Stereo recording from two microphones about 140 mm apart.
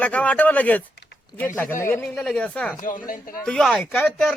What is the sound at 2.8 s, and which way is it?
Speech, 70° left (ahead or behind).